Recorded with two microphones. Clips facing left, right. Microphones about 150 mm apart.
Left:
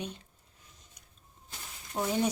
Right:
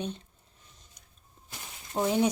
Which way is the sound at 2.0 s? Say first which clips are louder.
Right 4 dB; 20° right (ahead or behind).